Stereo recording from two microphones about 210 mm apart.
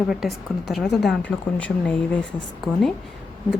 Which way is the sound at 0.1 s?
Centre (ahead or behind).